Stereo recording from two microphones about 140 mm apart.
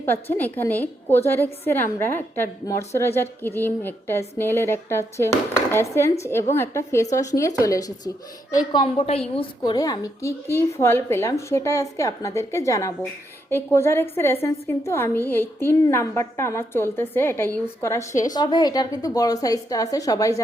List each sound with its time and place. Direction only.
0.0 s a woman's voice: 15° left (ahead or behind); by 9.7 s 40° left (ahead or behind)
9.7 s a woman's voice: 25° left (ahead or behind)
18.1 s a woman's voice: 65° left (ahead or behind)
18.3 s a woman's voice: 30° left (ahead or behind)